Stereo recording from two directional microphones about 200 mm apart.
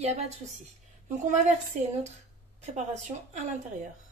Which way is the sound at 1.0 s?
40° right (ahead or behind).